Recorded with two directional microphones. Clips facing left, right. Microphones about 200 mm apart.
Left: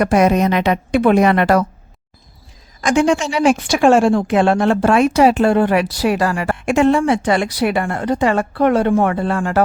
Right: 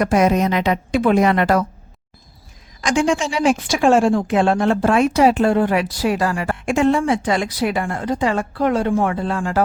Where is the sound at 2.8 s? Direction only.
60° left (ahead or behind).